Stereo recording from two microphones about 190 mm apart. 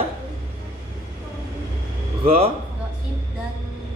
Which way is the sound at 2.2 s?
30° right (ahead or behind).